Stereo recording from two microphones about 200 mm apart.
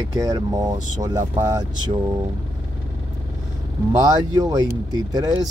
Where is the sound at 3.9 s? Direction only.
20° right (ahead or behind).